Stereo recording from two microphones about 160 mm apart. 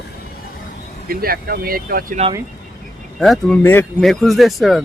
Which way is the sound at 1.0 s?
70° right (ahead or behind).